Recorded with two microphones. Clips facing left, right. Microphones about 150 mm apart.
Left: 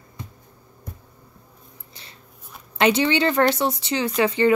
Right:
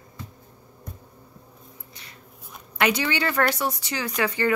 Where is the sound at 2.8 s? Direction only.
25° left (ahead or behind).